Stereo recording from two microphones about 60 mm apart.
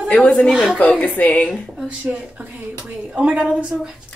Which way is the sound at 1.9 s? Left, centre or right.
Centre.